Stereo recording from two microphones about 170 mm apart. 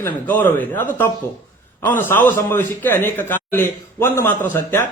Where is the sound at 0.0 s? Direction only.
15° left (ahead or behind).